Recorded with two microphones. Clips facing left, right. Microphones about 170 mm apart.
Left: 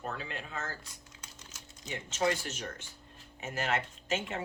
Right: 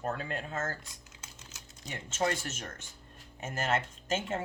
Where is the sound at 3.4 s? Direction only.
45° right (ahead or behind).